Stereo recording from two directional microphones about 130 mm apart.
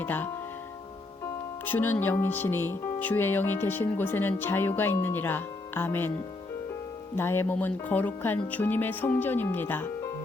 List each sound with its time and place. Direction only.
0.0 s speech: 15° left (ahead or behind)
1.6 s speech: 15° left (ahead or behind)
7.2 s speech: 20° left (ahead or behind)